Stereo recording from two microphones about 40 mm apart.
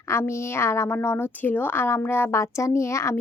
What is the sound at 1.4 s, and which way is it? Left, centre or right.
Speech, left.